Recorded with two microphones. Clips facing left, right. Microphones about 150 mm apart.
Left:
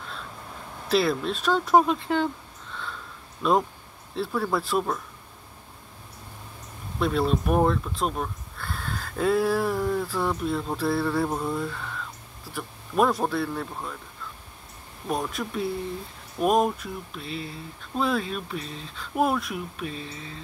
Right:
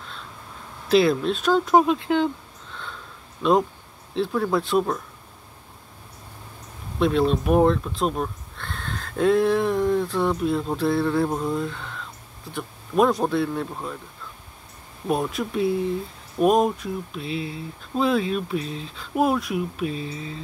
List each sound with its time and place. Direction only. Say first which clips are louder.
0.8 s speech: right 5 dB; centre (ahead or behind)
2.7 s a sound: left 1 dB; centre (ahead or behind)
4.1 s speech: right 4 dB; centre (ahead or behind)
7.0 s speech: right 4 dB; centre (ahead or behind)
15.0 s speech: right 4 dB; 5° right (ahead or behind)